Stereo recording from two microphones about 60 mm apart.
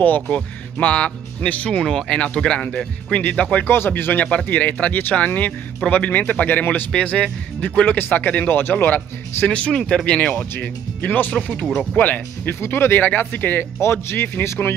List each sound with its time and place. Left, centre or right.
0.0 s speech: left
3.5 s speech: left
6.9 s speech: centre
9.5 s speech: centre
9.8 s speech: centre
10.0 s speech: centre
12.5 s speech: left